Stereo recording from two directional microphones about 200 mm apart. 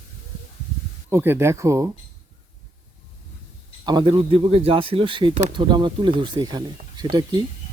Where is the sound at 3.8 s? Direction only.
25° right (ahead or behind).